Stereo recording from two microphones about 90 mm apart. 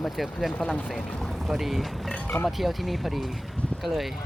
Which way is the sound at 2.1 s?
15° left (ahead or behind).